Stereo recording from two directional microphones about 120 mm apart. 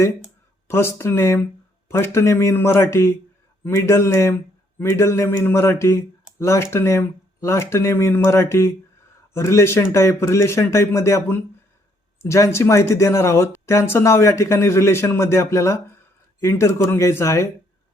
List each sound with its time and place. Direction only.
0.7 s speech: 20° left (ahead or behind)